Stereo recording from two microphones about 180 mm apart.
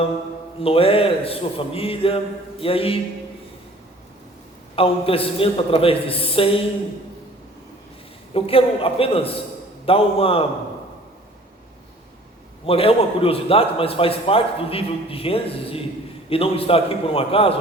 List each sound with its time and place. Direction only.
0.6 s a man's voice: 30° left (ahead or behind)
4.7 s a man's voice: 30° left (ahead or behind)
8.3 s a man's voice: 30° left (ahead or behind)
12.6 s a man's voice: 30° left (ahead or behind)